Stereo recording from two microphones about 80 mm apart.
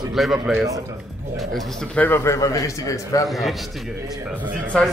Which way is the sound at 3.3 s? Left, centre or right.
Centre.